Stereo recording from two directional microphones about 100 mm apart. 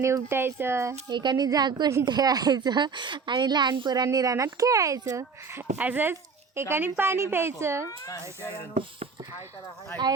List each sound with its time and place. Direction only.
0.0 s a woman's voice: 30° right (ahead or behind)
1.1 s a woman's voice: 50° right (ahead or behind)
5.5 s a woman's voice: 15° right (ahead or behind)
7.9 s speech: 30° left (ahead or behind)